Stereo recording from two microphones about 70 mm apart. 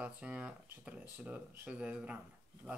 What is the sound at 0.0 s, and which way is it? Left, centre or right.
Speech, centre.